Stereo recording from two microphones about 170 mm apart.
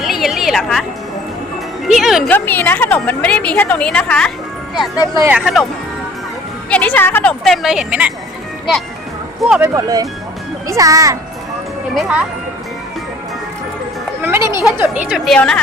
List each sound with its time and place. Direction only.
0.0 s a sound: centre (ahead or behind)
1.9 s a woman's voice: centre (ahead or behind)
2.3 s a woman's voice: 10° left (ahead or behind)
5.3 s a woman's voice: centre (ahead or behind)
6.7 s a woman's voice: 10° left (ahead or behind); by 8.1 s 5° right (ahead or behind)
9.6 s speech: 15° right (ahead or behind)
11.9 s speech: 5° right (ahead or behind)
14.2 s a woman's voice: 15° right (ahead or behind); by 15.6 s 5° left (ahead or behind)